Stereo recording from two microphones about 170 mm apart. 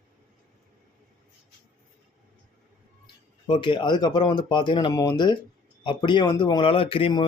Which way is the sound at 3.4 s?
30° left (ahead or behind).